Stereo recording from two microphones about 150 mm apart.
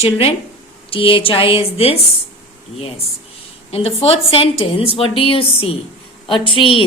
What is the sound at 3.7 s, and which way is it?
A woman's voice, 40° left (ahead or behind).